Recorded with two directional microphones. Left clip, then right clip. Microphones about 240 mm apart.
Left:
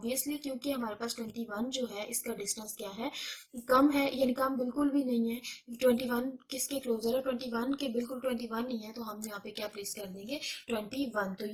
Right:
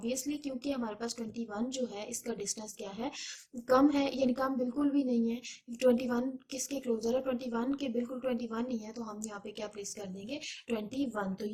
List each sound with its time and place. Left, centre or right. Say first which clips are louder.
0.0 s a woman's voice: even; left
3.7 s a woman's voice: left 1 dB; left
10.2 s a woman's voice: left 2 dB; left